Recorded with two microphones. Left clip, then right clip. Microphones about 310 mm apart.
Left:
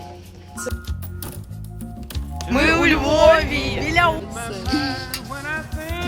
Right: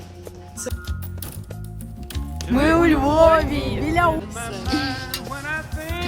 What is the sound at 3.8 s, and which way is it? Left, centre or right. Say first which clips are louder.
Music: left 1 dB; centre.